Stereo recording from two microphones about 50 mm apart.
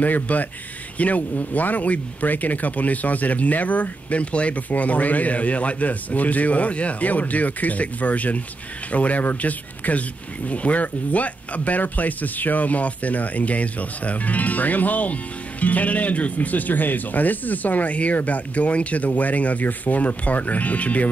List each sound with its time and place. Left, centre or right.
0.0 s speech: left